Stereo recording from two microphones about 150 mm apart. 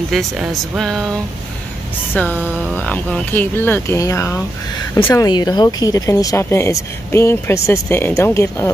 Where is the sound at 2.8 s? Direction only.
10° left (ahead or behind).